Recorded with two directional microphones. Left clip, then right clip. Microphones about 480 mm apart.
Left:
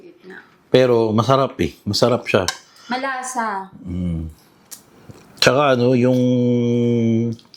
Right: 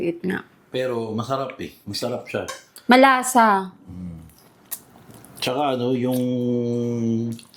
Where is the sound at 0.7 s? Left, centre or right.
Left.